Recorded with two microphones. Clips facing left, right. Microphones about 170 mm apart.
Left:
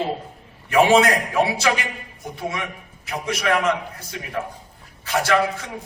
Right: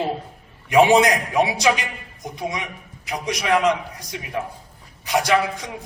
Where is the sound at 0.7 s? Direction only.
15° right (ahead or behind).